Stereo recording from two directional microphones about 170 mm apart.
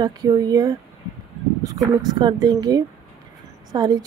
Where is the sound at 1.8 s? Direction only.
25° right (ahead or behind).